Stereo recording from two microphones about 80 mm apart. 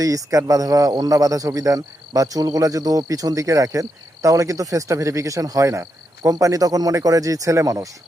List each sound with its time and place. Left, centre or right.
0.0 s speech: right